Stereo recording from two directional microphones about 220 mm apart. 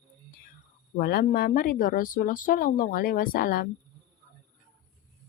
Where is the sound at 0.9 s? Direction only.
40° left (ahead or behind).